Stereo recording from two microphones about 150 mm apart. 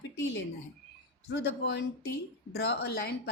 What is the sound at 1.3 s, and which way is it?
A woman's voice, 90° left.